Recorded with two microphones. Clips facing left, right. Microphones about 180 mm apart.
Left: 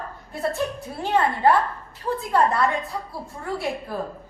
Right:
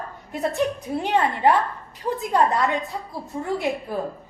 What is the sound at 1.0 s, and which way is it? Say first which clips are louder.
A woman's voice: even; 20° right (ahead or behind).